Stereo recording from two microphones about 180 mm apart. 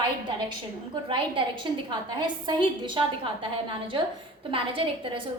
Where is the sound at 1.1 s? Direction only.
30° right (ahead or behind).